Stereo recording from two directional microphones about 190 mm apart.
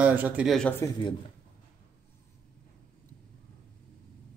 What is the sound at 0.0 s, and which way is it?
Speech, 10° right (ahead or behind).